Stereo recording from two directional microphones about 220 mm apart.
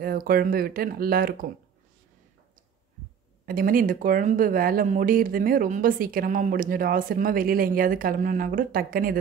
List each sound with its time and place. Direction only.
0.0 s speech: 40° right (ahead or behind)
3.4 s speech: 40° right (ahead or behind)